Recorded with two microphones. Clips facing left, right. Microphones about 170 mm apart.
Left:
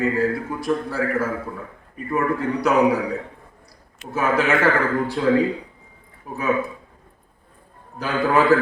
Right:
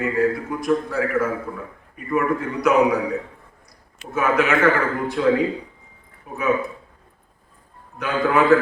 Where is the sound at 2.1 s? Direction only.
30° left (ahead or behind).